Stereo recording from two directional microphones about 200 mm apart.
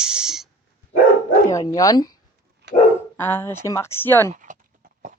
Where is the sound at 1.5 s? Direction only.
15° left (ahead or behind).